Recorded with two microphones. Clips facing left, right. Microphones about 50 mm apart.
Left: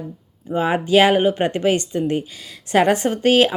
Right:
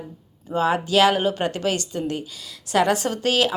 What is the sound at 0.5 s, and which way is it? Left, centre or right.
A woman's voice, left.